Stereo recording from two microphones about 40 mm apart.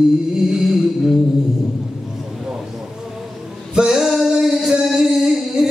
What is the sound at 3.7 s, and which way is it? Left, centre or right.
Music, centre.